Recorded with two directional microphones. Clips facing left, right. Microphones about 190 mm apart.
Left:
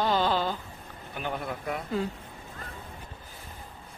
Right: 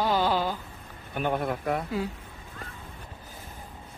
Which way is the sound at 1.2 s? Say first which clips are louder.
Right 6 dB; 55° right (ahead or behind).